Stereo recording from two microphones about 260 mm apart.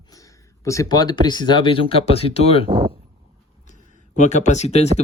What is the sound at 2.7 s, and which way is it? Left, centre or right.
Speech, centre.